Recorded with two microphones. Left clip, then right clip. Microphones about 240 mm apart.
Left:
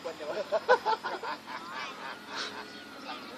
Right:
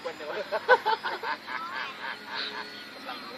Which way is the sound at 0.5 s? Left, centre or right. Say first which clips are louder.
Right 3 dB; centre.